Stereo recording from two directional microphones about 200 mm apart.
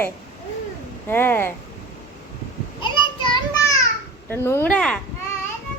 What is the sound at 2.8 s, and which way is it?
Child singing, 25° left (ahead or behind).